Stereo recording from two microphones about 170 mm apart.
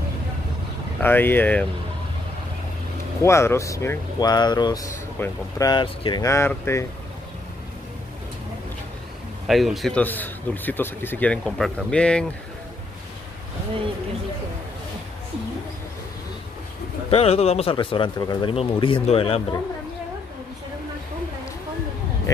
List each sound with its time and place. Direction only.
1.0 s speech: 10° left (ahead or behind)
3.2 s speech: 15° left (ahead or behind)
9.5 s speech: centre (ahead or behind)
17.1 s speech: 35° left (ahead or behind)